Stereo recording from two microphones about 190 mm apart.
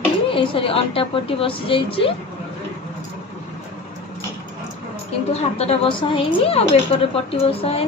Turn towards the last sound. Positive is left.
turn(degrees=30)  # may be behind; listen again after turning